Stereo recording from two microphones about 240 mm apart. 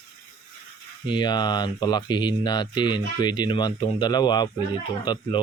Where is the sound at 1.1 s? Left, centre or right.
Centre.